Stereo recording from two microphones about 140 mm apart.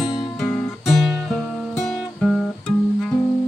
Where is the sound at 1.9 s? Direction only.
5° left (ahead or behind).